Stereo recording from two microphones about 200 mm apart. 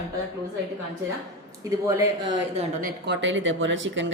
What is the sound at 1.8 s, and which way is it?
Speech, 15° right (ahead or behind).